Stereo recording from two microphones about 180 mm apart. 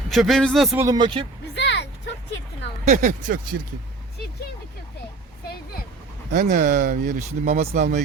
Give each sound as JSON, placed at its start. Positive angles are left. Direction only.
{"t": 0.1, "sound": "a man's voice", "side_deg": 0}
{"t": 0.8, "sound": "speech", "side_deg": -20}
{"t": 1.5, "sound": "a sound", "side_deg": 75}
{"t": 2.8, "sound": "speech", "side_deg": -40}
{"t": 6.3, "sound": "speech", "side_deg": -55}